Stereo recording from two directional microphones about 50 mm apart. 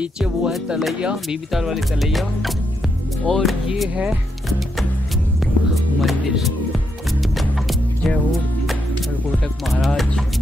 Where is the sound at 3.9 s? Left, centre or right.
Right.